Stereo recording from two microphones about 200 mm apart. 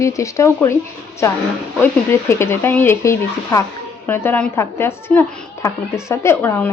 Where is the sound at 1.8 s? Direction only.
15° left (ahead or behind).